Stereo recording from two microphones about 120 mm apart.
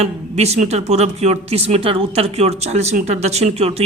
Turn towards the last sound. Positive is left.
turn(degrees=-60)  # may be behind; listen again after turning